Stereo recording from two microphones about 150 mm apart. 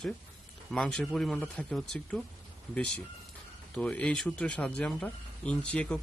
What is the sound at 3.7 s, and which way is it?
A man's voice, 5° left (ahead or behind).